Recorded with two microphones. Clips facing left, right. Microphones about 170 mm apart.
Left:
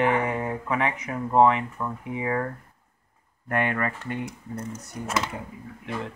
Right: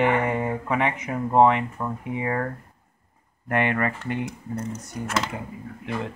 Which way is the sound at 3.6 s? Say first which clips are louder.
Right 3 dB; 20° right (ahead or behind).